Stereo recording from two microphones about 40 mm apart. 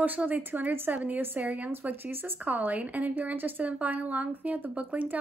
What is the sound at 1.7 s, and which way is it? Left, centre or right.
Speech, right.